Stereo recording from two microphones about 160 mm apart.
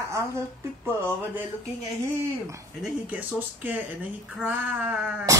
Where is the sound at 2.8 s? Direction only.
10° right (ahead or behind).